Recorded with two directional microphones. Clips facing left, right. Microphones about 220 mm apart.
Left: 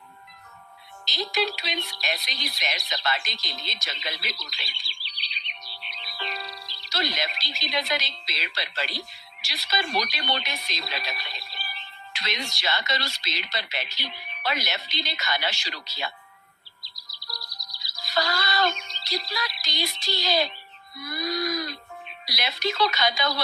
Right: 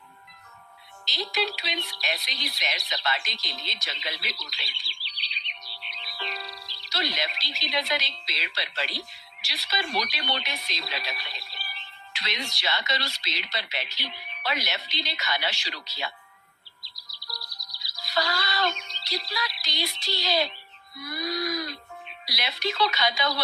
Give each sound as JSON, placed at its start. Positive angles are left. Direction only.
{"t": 1.0, "sound": "speech", "side_deg": 45}
{"t": 16.9, "sound": "music", "side_deg": 45}
{"t": 21.1, "sound": "a sound", "side_deg": 45}
{"t": 22.3, "sound": "speech", "side_deg": 45}